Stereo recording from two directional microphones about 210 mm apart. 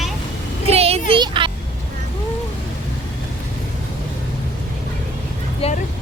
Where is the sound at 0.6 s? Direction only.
30° right (ahead or behind).